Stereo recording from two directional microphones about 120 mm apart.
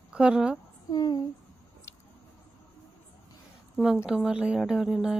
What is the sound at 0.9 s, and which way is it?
Speech, 35° left (ahead or behind).